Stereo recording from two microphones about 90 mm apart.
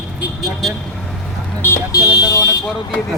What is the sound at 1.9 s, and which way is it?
Car alarm, 45° left (ahead or behind).